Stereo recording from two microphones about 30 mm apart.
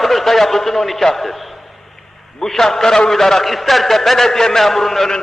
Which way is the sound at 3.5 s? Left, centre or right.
Centre.